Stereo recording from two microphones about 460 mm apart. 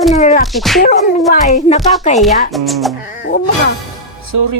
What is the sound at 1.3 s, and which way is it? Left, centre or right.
Speech, centre.